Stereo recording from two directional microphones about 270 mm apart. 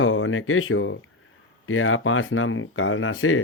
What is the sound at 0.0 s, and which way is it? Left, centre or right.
Speech, left.